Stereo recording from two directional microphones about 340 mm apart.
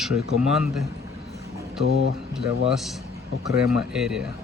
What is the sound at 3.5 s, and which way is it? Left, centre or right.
Speech, centre.